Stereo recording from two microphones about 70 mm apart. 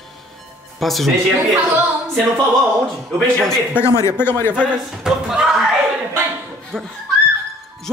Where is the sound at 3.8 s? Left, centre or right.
Left.